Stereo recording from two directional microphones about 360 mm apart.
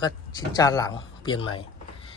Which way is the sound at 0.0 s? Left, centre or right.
Centre.